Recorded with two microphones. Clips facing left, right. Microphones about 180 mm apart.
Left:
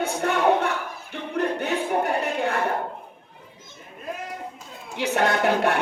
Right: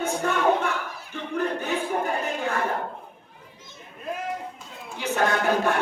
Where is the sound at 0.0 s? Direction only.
65° left (ahead or behind).